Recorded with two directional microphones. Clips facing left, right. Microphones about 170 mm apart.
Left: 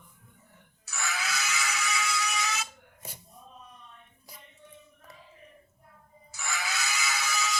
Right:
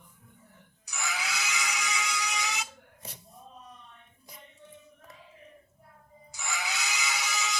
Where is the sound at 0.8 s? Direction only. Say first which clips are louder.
Left 1 dB; 15° right (ahead or behind).